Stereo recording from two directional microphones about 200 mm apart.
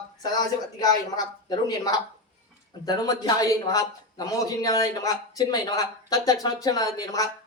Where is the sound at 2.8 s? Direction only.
20° left (ahead or behind).